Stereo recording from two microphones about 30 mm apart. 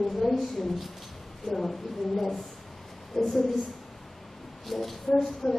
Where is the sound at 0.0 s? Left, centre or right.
Centre.